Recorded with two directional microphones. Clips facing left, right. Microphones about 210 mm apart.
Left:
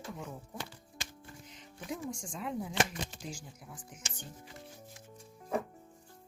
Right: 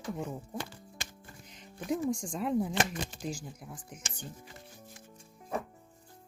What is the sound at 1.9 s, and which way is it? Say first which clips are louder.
Speech: right 8 dB; 45° right (ahead or behind).